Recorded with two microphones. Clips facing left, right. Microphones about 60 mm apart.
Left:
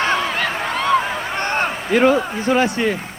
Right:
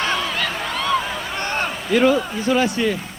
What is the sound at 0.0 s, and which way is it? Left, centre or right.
A man's voice, left.